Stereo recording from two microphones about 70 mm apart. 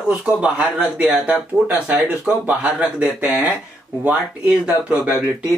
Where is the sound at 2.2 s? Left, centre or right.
Centre.